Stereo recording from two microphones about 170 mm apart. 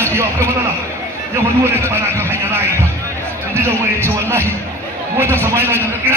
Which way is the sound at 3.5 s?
15° right (ahead or behind).